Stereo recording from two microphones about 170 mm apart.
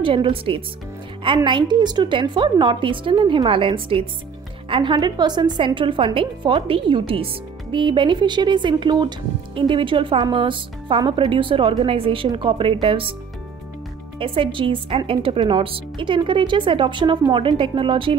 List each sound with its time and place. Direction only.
0.0 s speech: 30° right (ahead or behind)
14.2 s speech: 30° right (ahead or behind)